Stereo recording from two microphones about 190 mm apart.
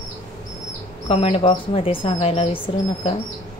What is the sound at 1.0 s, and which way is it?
Speech, 30° left (ahead or behind).